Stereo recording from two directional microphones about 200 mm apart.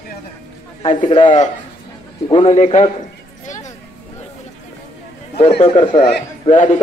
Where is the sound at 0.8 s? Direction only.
30° left (ahead or behind).